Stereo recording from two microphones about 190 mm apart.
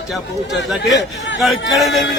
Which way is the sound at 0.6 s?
Centre (ahead or behind).